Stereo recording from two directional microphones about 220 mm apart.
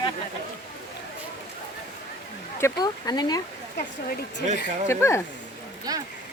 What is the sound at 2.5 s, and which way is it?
Speech, 15° left (ahead or behind).